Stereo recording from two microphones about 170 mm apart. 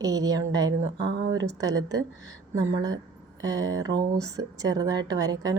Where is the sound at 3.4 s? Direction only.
20° right (ahead or behind).